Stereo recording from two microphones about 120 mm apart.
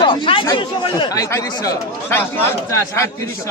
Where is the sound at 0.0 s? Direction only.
40° left (ahead or behind).